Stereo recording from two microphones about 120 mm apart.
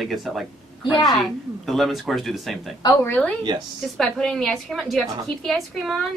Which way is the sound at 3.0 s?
10° left (ahead or behind).